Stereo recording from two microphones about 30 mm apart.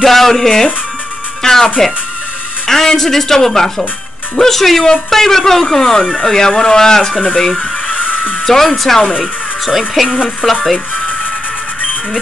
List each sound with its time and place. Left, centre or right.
0.0 s a woman's voice: centre
7.9 s music: left
8.5 s a woman's voice: centre
9.2 s speech: centre
10.0 s speech: right
10.4 s speech: centre